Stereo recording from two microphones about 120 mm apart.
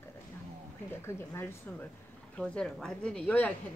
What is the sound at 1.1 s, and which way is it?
Speech, 20° left (ahead or behind).